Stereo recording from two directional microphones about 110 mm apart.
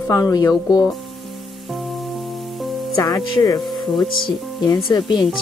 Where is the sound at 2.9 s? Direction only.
35° left (ahead or behind).